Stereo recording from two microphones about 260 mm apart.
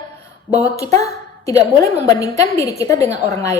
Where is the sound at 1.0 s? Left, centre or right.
Centre.